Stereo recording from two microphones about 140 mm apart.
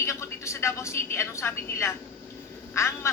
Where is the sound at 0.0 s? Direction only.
20° left (ahead or behind).